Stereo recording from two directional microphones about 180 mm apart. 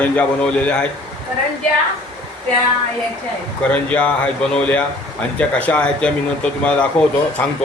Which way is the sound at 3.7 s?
5° left (ahead or behind).